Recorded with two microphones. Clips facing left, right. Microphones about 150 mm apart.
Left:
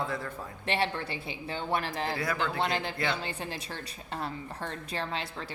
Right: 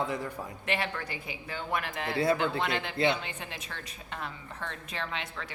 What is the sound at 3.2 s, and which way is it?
A woman's voice, 35° left (ahead or behind).